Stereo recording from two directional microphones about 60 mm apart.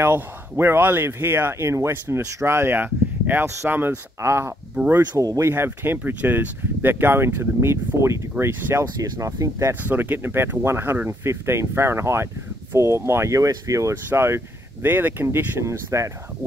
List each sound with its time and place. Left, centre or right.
0.0 s speech: right
4.2 s speech: right
8.5 s speech: right
9.0 s speech: right
9.8 s speech: right
13.3 s speech: right
14.0 s speech: right
15.9 s speech: right